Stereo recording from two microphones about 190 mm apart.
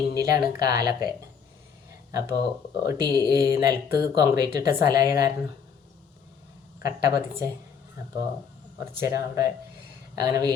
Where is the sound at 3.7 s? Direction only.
50° left (ahead or behind).